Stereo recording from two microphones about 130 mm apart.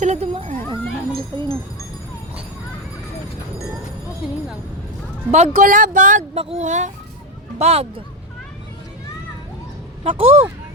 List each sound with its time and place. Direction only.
0.0 s a sound: 55° right (ahead or behind)
1.3 s speech: 40° right (ahead or behind)
5.3 s speech: 75° right (ahead or behind)
6.3 s speech: 50° right (ahead or behind); by 6.9 s 65° right (ahead or behind)
7.6 s speech: 50° right (ahead or behind)
10.0 s speech: 50° right (ahead or behind)